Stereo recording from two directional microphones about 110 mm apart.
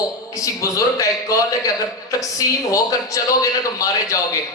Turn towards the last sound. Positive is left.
turn(degrees=30)  # may be behind; listen again after turning